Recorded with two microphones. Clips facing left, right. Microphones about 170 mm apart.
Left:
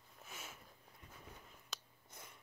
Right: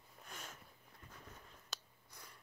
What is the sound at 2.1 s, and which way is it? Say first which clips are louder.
Cat: left 2 dB; 20° left (ahead or behind).